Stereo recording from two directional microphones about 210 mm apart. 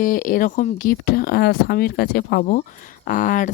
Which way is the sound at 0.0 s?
40° left (ahead or behind).